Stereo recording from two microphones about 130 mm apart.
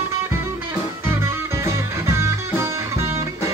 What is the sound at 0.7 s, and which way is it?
Music, 20° right (ahead or behind).